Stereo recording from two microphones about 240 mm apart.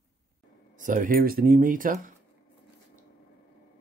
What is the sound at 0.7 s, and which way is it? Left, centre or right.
Speech, right.